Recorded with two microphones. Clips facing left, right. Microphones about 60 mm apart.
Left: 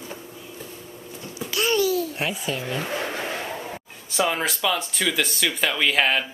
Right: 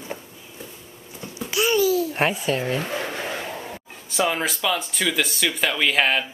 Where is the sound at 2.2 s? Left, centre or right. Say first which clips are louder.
Right 5 dB; right.